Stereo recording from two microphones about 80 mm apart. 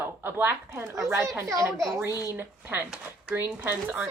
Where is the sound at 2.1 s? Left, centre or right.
Left.